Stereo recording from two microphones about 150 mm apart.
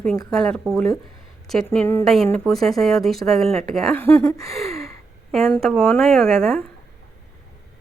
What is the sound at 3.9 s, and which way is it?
Speech, 15° left (ahead or behind).